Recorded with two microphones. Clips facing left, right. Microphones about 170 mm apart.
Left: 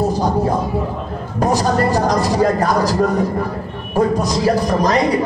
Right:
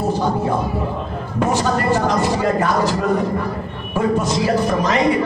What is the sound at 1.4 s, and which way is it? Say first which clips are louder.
A man's voice: left 2 dB; 40° left (ahead or behind).